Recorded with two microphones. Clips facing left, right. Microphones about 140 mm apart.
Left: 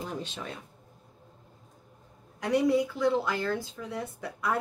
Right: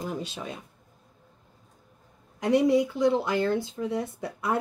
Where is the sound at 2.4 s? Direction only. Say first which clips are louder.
Right 3 dB; 20° right (ahead or behind).